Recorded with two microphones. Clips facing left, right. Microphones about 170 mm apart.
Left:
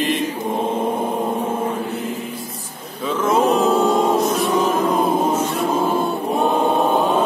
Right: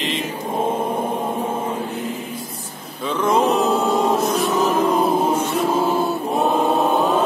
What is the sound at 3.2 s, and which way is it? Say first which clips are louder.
Music: left 1 dB; centre (ahead or behind).